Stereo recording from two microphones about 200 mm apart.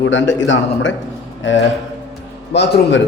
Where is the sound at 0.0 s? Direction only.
65° left (ahead or behind).